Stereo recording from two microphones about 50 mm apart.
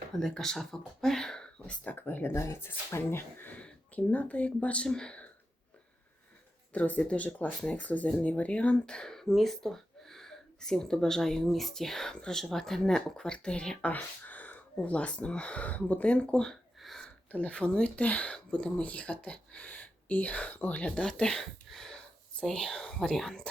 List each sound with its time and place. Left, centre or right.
0.2 s speech: centre
1.6 s speech: left
2.0 s speech: left
2.3 s speech: left
2.6 s speech: left
3.5 s speech: left
4.9 s speech: centre
6.7 s speech: left
13.9 s a sound: left
14.8 s speech: left
17.3 s speech: left
20.9 s speech: centre
21.7 s a sound: centre
22.4 s speech: centre